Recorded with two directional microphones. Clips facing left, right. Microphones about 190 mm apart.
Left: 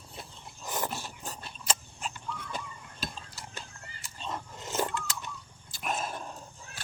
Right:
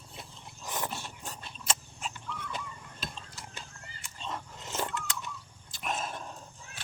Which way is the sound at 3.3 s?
35° left (ahead or behind).